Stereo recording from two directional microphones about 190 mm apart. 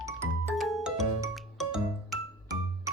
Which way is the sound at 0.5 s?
Centre (ahead or behind).